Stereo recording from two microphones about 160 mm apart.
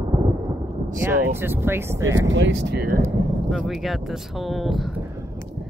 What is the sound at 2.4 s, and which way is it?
Speech, 90° right.